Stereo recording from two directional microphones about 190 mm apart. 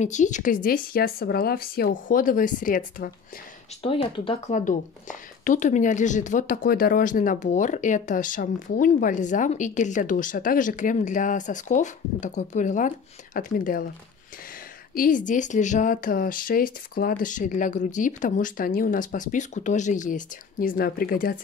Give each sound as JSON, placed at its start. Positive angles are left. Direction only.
{"t": 0.0, "sound": "speech", "side_deg": 40}
{"t": 3.8, "sound": "speech", "side_deg": 30}
{"t": 4.6, "sound": "speech", "side_deg": 40}
{"t": 15.0, "sound": "speech", "side_deg": 45}